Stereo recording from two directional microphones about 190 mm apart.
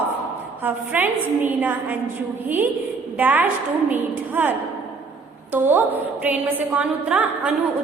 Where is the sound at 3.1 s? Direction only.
10° right (ahead or behind).